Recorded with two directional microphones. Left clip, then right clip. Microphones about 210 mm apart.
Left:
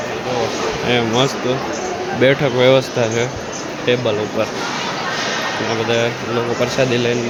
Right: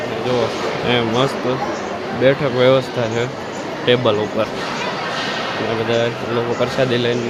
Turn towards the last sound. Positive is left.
turn(degrees=5)  # may be behind; listen again after turning